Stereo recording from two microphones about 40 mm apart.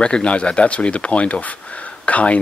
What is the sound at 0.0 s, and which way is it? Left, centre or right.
Speech, left.